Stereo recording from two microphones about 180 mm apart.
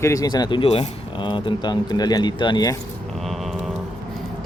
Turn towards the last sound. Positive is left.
turn(degrees=0)  # may be behind; listen again after turning